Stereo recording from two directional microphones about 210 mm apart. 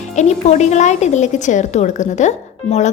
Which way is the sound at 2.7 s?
25° left (ahead or behind).